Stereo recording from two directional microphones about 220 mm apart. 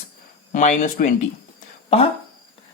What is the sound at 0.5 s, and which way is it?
Speech, 35° left (ahead or behind).